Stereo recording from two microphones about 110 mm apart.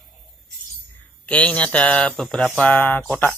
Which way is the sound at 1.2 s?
10° left (ahead or behind).